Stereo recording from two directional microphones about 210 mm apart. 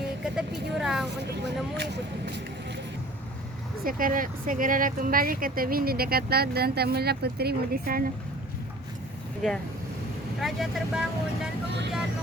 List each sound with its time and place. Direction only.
0.3 s vehicle: centre (ahead or behind)
1.7 s speech: 55° right (ahead or behind)
3.8 s speech: 40° right (ahead or behind)
10.4 s speech: centre (ahead or behind)